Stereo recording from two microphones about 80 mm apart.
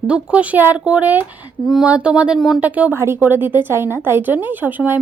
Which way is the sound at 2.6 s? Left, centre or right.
Centre.